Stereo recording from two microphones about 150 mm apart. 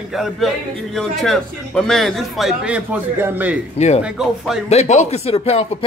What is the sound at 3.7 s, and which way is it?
Speech, 45° left (ahead or behind).